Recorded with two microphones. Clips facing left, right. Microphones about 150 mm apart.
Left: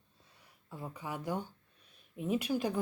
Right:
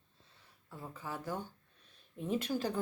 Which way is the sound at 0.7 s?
15° left (ahead or behind).